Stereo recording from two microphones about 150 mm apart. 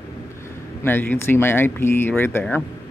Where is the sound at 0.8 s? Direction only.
15° left (ahead or behind).